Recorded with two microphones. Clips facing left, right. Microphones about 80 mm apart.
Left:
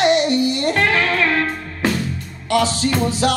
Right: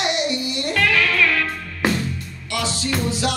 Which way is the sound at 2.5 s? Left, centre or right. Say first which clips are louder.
Left 8 dB; left.